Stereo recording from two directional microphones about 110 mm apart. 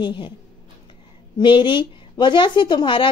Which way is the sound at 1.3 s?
45° left (ahead or behind).